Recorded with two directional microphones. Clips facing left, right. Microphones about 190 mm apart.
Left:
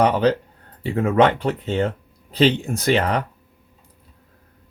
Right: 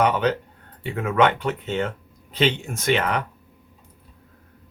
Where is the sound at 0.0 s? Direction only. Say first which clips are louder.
Left 3 dB; 35° left (ahead or behind).